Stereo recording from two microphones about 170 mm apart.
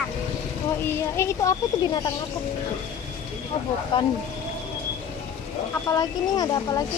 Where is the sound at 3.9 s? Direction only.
30° left (ahead or behind).